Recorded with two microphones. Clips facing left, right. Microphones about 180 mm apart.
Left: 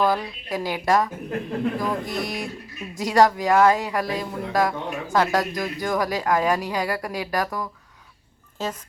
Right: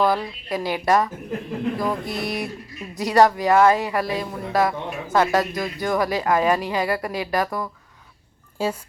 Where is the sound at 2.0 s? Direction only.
15° left (ahead or behind).